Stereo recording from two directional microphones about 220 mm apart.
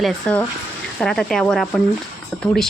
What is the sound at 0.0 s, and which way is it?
Speech, 5° left (ahead or behind).